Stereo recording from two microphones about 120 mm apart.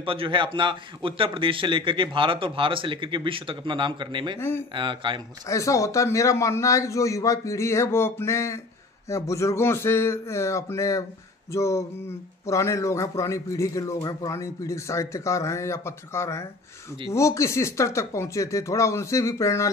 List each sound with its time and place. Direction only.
0.0 s a man's voice: 45° right (ahead or behind)
4.4 s a man's voice: 20° left (ahead or behind)
4.7 s a man's voice: 40° right (ahead or behind)
5.5 s a man's voice: 25° left (ahead or behind)